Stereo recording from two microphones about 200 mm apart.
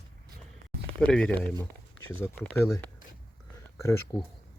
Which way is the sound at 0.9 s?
5° left (ahead or behind).